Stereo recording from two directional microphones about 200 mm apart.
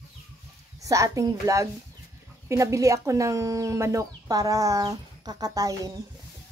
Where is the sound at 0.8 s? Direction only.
15° right (ahead or behind).